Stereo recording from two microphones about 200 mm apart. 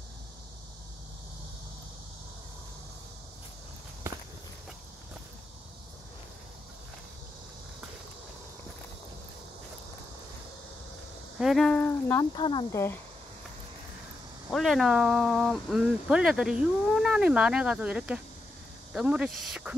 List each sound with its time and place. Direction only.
11.3 s speech: centre (ahead or behind)
12.4 s speech: 25° left (ahead or behind)
14.5 s speech: centre (ahead or behind)